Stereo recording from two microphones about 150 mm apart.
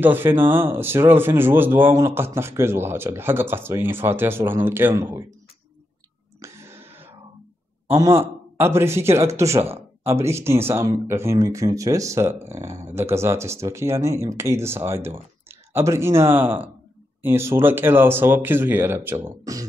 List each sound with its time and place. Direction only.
0.0 s speech: 15° right (ahead or behind)
6.4 s a sound: 15° right (ahead or behind)
7.9 s speech: 20° right (ahead or behind)